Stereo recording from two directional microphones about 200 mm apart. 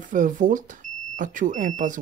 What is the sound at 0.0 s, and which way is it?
Speech, 40° right (ahead or behind).